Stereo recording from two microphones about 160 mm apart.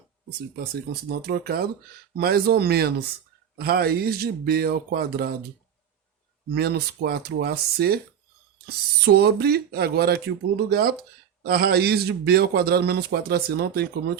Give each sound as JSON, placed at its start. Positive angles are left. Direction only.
{"t": 1.2, "sound": "speech", "side_deg": -75}
{"t": 6.5, "sound": "a man's voice", "side_deg": -80}
{"t": 9.0, "sound": "a man's voice", "side_deg": -80}